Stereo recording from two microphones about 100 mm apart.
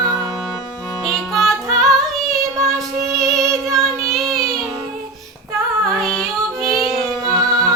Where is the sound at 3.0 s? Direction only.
35° right (ahead or behind).